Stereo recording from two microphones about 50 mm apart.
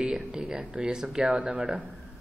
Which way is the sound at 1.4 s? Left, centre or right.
Right.